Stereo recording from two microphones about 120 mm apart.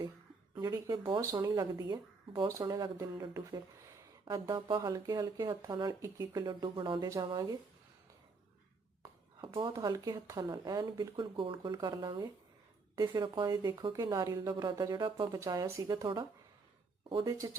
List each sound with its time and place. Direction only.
0.6 s speech: 35° right (ahead or behind)
2.5 s speech: 30° right (ahead or behind)
9.4 s speech: 45° right (ahead or behind)
15.4 s speech: 30° right (ahead or behind)
17.2 s speech: 25° right (ahead or behind)